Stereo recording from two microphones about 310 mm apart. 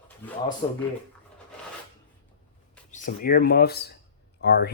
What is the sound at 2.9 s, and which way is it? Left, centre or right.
Speech, left.